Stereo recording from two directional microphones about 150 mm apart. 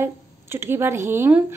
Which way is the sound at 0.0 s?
15° right (ahead or behind).